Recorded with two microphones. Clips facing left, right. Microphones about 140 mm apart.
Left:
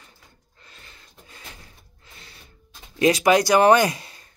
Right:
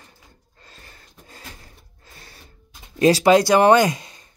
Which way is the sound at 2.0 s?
40° right (ahead or behind).